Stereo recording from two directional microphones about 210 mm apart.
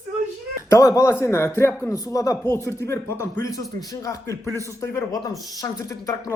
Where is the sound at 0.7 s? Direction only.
15° left (ahead or behind).